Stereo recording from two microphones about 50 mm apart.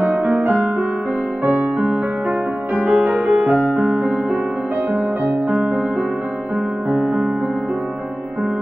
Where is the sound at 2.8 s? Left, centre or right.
Right.